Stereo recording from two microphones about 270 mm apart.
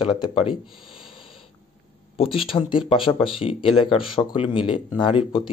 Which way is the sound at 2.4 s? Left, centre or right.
Centre.